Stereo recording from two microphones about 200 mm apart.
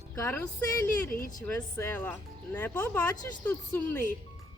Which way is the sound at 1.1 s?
45° left (ahead or behind).